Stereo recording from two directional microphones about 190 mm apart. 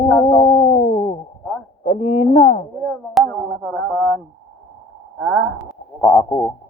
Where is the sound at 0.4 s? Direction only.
30° left (ahead or behind).